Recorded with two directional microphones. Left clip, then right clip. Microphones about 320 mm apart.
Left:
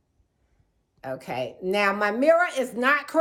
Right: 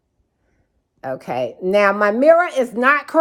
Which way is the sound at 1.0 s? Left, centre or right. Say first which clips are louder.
Right 8 dB; right.